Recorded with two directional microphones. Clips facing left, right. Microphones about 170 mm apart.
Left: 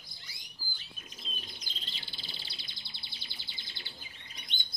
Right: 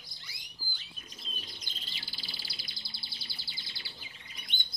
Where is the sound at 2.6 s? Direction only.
35° right (ahead or behind).